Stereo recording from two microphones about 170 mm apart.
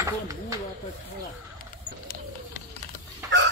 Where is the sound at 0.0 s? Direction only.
20° right (ahead or behind).